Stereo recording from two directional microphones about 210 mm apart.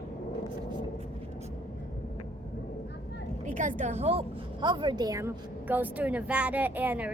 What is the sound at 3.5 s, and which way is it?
A woman's voice, 35° right (ahead or behind).